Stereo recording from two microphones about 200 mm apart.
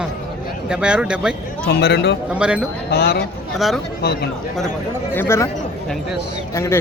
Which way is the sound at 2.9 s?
55° left (ahead or behind).